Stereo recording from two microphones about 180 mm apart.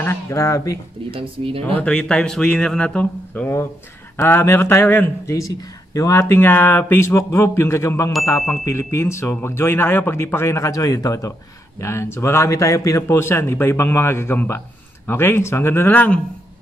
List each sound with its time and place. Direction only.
0.0 s speech: 15° left (ahead or behind)
1.1 s speech: 30° right (ahead or behind)
1.8 s speech: 5° left (ahead or behind)